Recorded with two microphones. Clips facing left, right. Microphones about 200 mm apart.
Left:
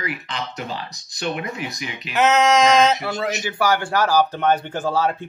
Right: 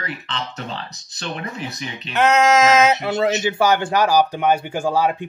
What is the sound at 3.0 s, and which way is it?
Speech, 25° right (ahead or behind).